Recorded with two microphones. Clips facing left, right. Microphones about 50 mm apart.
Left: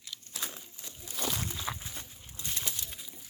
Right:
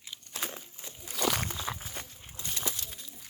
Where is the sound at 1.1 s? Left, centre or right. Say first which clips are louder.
Right 6 dB; right.